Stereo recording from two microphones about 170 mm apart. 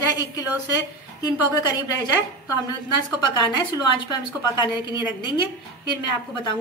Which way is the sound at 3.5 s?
25° left (ahead or behind).